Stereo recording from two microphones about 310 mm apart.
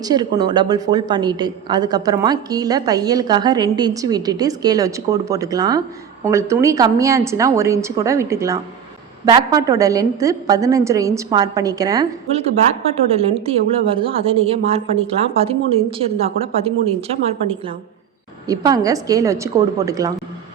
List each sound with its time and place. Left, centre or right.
0.0 s a woman's voice: centre